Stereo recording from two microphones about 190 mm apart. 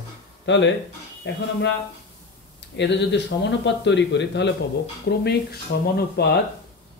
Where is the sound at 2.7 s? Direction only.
65° left (ahead or behind).